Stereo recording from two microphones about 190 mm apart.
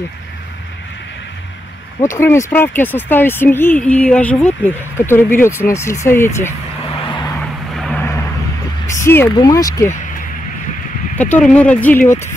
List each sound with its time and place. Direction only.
2.1 s speech: 10° left (ahead or behind)
7.1 s vehicle: 25° left (ahead or behind)
7.3 s vehicle: 5° left (ahead or behind)
8.8 s speech: 15° left (ahead or behind)
11.1 s speech: 10° left (ahead or behind)